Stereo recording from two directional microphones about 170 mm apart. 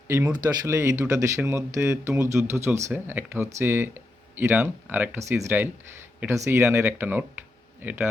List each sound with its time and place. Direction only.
0.1 s speech: 20° right (ahead or behind)